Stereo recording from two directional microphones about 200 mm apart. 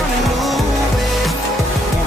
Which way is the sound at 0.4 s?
Centre (ahead or behind).